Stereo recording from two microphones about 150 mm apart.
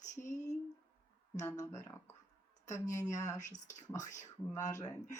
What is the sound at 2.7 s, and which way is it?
Speech, 55° left (ahead or behind).